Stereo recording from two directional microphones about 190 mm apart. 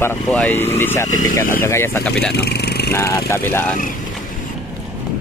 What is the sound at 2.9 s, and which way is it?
Speech, 15° left (ahead or behind).